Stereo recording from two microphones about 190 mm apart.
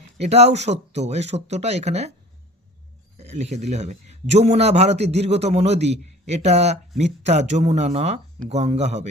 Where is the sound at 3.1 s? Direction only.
35° right (ahead or behind).